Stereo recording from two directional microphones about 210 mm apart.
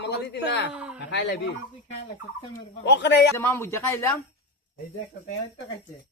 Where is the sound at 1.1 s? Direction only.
55° left (ahead or behind).